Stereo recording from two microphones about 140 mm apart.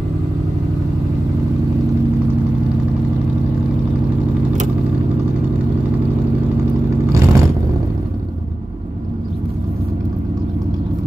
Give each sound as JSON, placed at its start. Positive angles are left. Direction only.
{"t": 7.1, "sound": "vehicle", "side_deg": -20}